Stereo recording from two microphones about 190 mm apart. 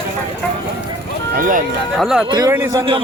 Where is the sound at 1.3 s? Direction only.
45° right (ahead or behind).